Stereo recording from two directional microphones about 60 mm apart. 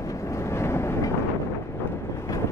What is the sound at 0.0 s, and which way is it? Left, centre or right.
Vehicle, left.